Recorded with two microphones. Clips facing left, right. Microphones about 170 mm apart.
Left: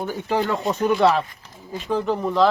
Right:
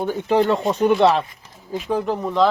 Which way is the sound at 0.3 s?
Centre (ahead or behind).